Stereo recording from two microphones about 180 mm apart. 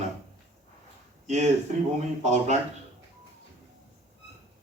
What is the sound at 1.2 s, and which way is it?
Speech, 40° right (ahead or behind).